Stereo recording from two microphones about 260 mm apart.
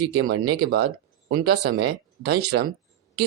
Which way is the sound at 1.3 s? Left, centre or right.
Right.